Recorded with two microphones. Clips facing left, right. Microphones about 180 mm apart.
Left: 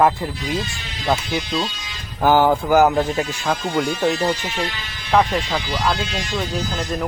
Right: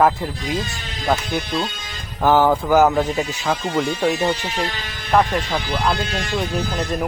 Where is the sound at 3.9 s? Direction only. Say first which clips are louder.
Even; 10° right (ahead or behind).